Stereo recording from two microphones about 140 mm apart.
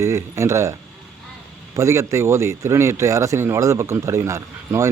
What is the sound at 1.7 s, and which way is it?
Speech, 20° right (ahead or behind).